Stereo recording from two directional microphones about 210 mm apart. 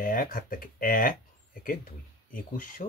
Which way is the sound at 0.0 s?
40° left (ahead or behind).